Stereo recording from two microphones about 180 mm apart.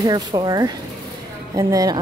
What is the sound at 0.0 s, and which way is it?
Speech, 25° right (ahead or behind).